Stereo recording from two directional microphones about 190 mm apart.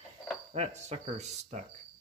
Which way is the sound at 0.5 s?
35° right (ahead or behind).